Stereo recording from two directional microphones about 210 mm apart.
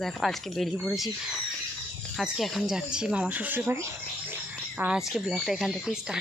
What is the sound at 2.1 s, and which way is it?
Speech, centre (ahead or behind).